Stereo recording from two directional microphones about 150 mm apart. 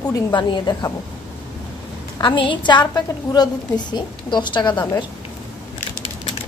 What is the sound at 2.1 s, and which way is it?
A woman's voice, 30° left (ahead or behind).